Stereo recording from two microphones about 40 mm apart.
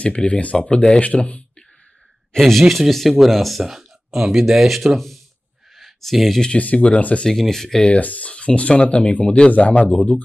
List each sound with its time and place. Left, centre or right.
0.0 s speech: left
2.3 s speech: centre
5.8 s a sound: centre
6.8 s speech: left
7.2 s speech: centre
7.9 s speech: left
8.3 s speech: left
9.8 s speech: left